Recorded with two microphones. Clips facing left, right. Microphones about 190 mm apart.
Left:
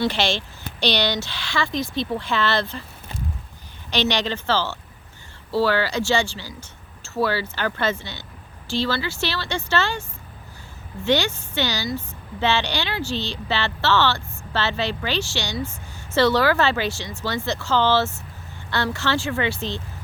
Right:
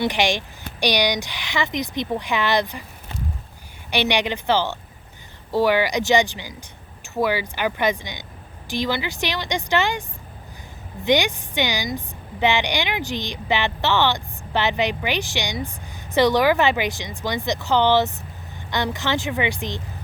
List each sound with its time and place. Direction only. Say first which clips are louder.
0.0 s a woman's voice: right 1 dB; 15° right (ahead or behind)
3.9 s a woman's voice: right 1 dB; 15° right (ahead or behind)
11.0 s a woman's voice: right 2 dB; 15° right (ahead or behind)